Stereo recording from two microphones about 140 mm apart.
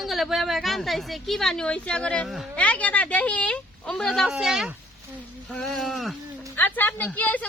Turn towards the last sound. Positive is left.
turn(degrees=10)  # may be behind; listen again after turning